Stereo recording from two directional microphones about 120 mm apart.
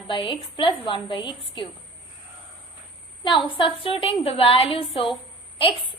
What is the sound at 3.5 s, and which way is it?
Speech, 50° left (ahead or behind).